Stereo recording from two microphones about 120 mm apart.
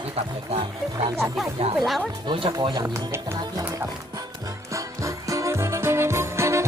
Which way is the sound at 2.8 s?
20° right (ahead or behind).